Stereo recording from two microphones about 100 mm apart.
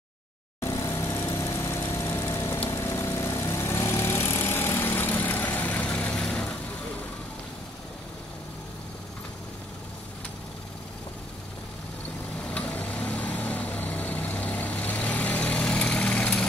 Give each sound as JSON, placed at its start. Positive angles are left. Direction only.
{"t": 0.6, "sound": "lawn mower", "side_deg": 30}
{"t": 2.7, "sound": "vehicle", "side_deg": 30}
{"t": 12.4, "sound": "vehicle", "side_deg": 15}